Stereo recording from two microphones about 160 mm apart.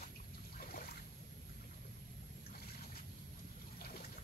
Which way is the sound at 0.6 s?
65° left (ahead or behind).